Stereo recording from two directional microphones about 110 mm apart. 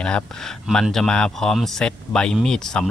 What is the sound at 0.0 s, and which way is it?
Speech, 10° left (ahead or behind).